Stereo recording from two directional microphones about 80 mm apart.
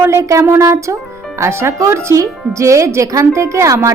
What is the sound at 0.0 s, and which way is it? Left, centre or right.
A woman's voice, right.